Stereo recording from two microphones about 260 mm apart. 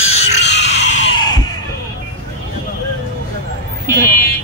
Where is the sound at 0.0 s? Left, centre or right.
Left.